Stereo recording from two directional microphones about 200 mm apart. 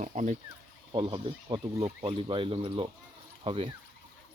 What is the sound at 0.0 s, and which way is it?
Speech, 35° right (ahead or behind).